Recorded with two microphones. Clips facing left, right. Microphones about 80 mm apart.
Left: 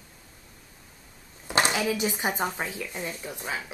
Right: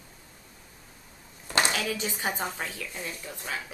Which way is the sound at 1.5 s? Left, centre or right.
Centre.